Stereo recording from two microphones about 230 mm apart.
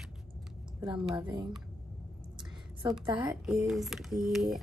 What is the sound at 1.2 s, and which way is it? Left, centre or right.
Speech, right.